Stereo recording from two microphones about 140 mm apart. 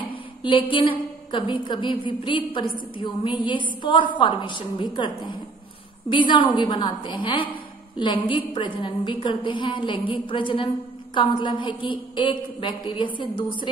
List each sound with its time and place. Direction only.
0.4 s a woman's voice: 35° left (ahead or behind)